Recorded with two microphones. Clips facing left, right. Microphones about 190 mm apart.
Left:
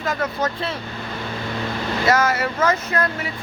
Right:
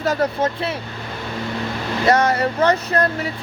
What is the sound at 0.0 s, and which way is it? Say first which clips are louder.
Speech: right 4 dB; 40° right (ahead or behind).